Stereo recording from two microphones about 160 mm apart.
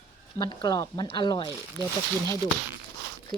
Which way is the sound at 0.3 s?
25° left (ahead or behind).